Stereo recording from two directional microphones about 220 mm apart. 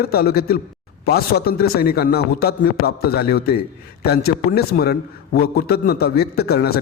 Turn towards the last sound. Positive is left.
turn(degrees=45)  # may be behind; listen again after turning